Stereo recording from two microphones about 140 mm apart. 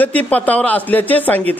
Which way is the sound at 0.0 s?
10° left (ahead or behind).